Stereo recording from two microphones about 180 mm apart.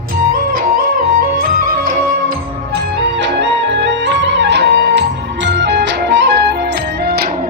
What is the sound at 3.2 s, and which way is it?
Music, 75° right (ahead or behind).